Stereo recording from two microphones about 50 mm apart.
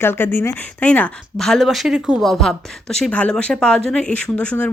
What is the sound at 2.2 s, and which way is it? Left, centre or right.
Speech, centre.